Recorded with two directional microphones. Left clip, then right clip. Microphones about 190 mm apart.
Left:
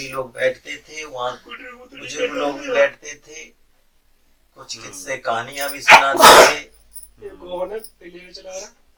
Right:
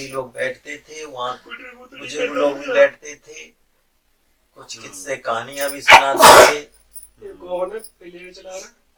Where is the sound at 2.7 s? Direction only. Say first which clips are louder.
Right 1 dB; 10° left (ahead or behind).